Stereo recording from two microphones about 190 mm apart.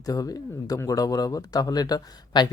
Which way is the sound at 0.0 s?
20° left (ahead or behind).